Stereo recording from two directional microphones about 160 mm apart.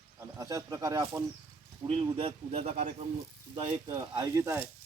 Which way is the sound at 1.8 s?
35° right (ahead or behind).